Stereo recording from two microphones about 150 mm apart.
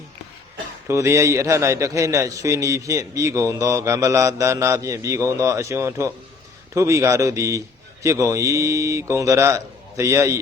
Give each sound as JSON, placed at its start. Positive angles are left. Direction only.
{"t": 0.9, "sound": "a man's voice", "side_deg": -20}